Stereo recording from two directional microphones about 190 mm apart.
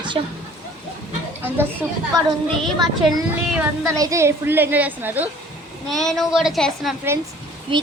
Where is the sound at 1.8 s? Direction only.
10° right (ahead or behind).